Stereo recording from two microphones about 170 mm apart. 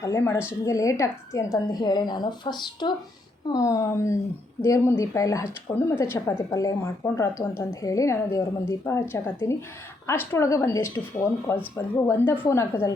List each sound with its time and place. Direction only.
0.0 s a woman's voice: 15° left (ahead or behind)